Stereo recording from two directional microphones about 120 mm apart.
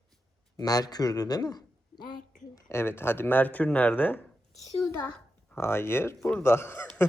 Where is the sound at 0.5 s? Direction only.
30° left (ahead or behind).